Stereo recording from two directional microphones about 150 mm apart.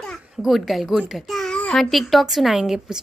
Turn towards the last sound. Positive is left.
turn(degrees=-5)  # may be behind; listen again after turning